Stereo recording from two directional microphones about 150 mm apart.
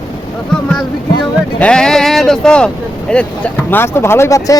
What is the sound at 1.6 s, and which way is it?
A man's voice, 5° left (ahead or behind).